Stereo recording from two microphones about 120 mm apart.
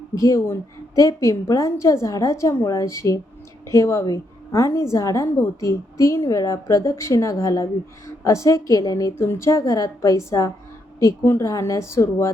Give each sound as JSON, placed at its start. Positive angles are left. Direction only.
{"t": 0.1, "sound": "a woman's voice", "side_deg": 30}